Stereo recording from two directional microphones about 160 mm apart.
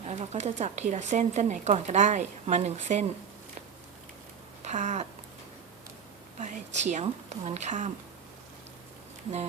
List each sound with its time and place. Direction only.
0.0 s speech: 45° right (ahead or behind)
4.6 s a sound: 50° right (ahead or behind)
6.4 s speech: 50° right (ahead or behind)